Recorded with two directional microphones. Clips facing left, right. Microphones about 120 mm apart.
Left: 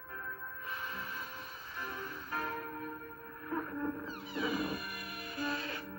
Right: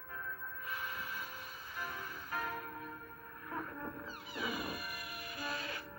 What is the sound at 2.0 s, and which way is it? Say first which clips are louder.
Music: left 4 dB; 35° left (ahead or behind).